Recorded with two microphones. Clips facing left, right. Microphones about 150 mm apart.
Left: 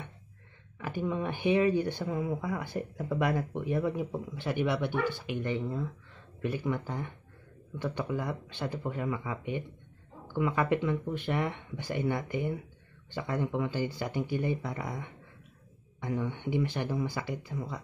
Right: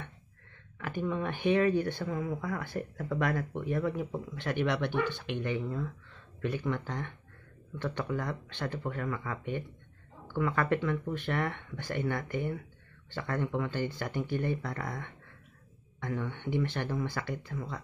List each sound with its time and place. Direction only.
0.7 s speech: 15° left (ahead or behind)